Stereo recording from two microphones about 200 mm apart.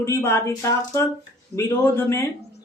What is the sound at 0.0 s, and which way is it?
Speech, 15° left (ahead or behind).